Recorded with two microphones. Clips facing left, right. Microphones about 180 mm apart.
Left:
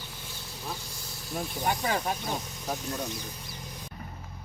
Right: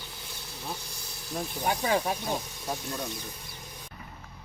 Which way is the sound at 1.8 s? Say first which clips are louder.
Right 2 dB; 10° right (ahead or behind).